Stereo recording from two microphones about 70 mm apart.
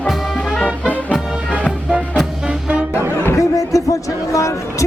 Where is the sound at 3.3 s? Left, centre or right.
Left.